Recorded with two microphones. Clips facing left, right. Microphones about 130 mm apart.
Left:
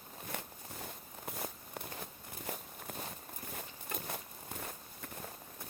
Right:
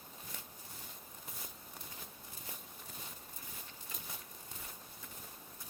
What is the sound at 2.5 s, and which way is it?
Walk, 65° left (ahead or behind).